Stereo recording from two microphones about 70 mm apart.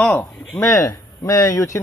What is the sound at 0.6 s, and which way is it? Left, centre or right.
Speech, left.